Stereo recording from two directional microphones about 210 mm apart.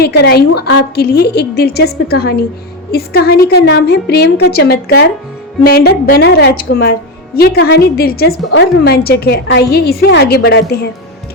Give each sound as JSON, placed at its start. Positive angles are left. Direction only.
{"t": 0.0, "sound": "a woman's voice", "side_deg": 50}